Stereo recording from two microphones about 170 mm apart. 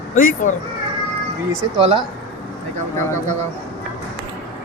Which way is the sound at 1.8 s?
30° right (ahead or behind).